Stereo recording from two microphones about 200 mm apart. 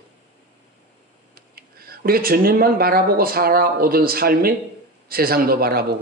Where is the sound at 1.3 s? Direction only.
50° right (ahead or behind).